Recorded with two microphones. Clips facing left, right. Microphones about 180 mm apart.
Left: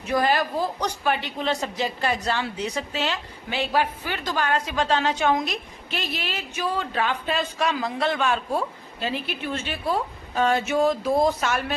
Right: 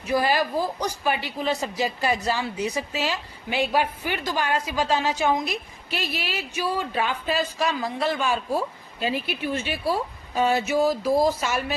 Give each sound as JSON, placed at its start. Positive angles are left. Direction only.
{"t": 0.1, "sound": "speech", "side_deg": -10}